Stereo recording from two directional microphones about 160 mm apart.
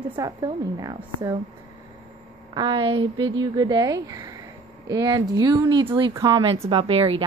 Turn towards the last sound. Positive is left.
turn(degrees=-35)  # may be behind; listen again after turning